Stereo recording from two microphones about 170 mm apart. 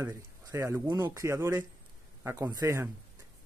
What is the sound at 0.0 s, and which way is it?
Speech, 15° right (ahead or behind).